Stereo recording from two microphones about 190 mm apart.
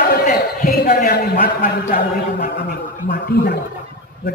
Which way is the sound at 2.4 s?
60° left (ahead or behind).